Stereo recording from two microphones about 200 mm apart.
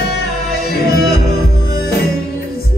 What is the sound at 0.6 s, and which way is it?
Music, 50° left (ahead or behind).